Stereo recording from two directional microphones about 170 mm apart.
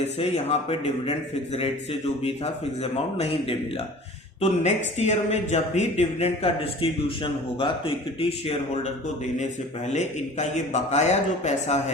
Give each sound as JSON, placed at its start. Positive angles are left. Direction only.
{"t": 0.2, "sound": "speech", "side_deg": 40}
{"t": 9.9, "sound": "speech", "side_deg": 45}